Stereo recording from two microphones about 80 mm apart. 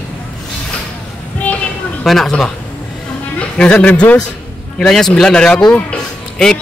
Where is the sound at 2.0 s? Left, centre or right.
Centre.